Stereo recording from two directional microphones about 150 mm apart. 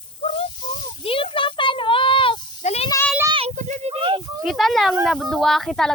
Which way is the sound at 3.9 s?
35° right (ahead or behind).